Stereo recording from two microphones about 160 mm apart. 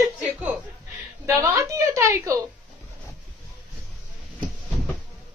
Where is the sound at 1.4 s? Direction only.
20° right (ahead or behind).